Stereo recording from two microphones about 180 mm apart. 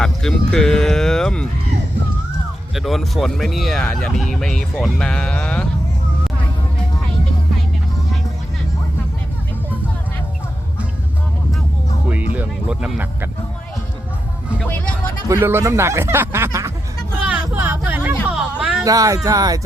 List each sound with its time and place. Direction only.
0.0 s speech: 5° left (ahead or behind)
2.7 s speech: centre (ahead or behind)
12.0 s music: 10° right (ahead or behind)
15.3 s speech: 15° right (ahead or behind)
18.3 s a sound: 5° right (ahead or behind)
18.9 s speech: 20° right (ahead or behind)